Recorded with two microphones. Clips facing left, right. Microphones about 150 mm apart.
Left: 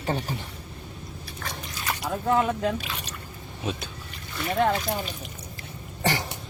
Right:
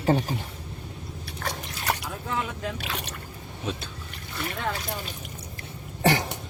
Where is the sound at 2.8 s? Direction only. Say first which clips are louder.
Right 2 dB; 65° right (ahead or behind).